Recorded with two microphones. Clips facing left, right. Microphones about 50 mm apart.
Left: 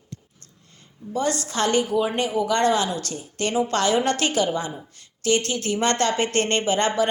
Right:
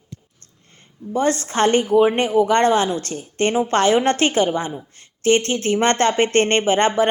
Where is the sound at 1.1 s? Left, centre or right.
Right.